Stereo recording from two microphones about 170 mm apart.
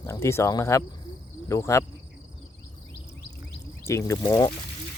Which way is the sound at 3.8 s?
15° left (ahead or behind).